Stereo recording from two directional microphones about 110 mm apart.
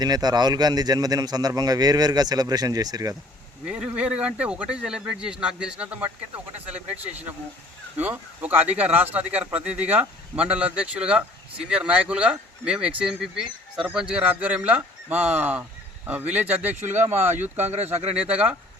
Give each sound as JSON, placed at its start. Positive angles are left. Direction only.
{"t": 0.0, "sound": "a man's voice", "side_deg": -40}
{"t": 3.7, "sound": "speech", "side_deg": -10}
{"t": 7.9, "sound": "speech", "side_deg": -15}
{"t": 17.2, "sound": "speech", "side_deg": -90}
{"t": 17.6, "sound": "speech", "side_deg": -75}